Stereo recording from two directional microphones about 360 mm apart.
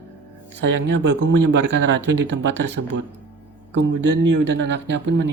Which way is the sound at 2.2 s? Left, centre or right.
Right.